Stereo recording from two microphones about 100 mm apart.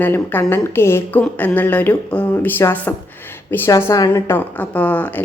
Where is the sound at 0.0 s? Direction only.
20° left (ahead or behind).